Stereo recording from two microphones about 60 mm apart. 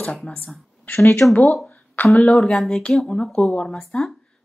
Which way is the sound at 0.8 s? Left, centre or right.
Left.